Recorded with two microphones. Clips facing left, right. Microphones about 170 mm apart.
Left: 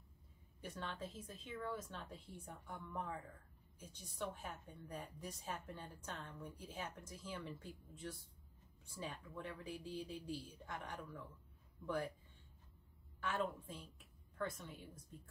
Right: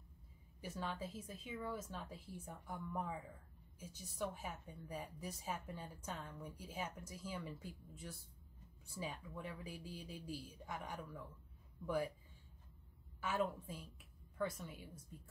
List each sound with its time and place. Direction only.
0.6 s a woman's voice: 5° right (ahead or behind)
13.2 s a woman's voice: 10° right (ahead or behind)